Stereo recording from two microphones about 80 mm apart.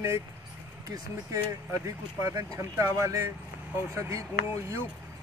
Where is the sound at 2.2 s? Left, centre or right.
Right.